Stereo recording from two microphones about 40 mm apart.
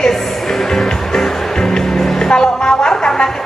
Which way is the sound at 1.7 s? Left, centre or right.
Centre.